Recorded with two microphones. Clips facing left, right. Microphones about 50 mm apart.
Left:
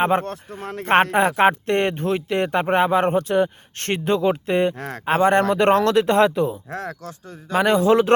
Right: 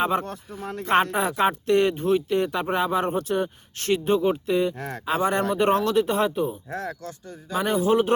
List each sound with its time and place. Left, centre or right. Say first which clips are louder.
0.0 s speech: left 4 dB; left
0.3 s a man's voice: left 3 dB; left
1.0 s speech: left 6 dB; left
4.8 s speech: left 2 dB; left
5.0 s a man's voice: left 6 dB; left